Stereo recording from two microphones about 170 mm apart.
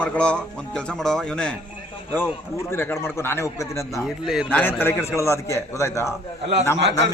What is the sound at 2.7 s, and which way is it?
A man's voice, 15° left (ahead or behind).